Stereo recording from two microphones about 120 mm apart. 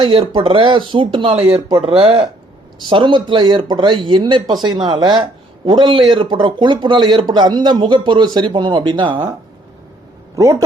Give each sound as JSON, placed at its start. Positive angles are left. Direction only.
{"t": 0.0, "sound": "speech", "side_deg": -45}
{"t": 10.3, "sound": "speech", "side_deg": -25}